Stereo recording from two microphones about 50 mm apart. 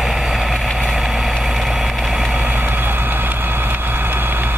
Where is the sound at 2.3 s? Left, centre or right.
Right.